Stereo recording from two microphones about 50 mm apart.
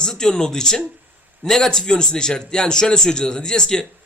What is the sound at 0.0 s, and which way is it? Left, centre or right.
A man's voice, centre.